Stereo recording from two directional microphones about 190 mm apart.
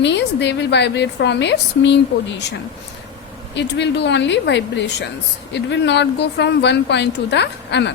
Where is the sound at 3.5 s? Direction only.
65° left (ahead or behind).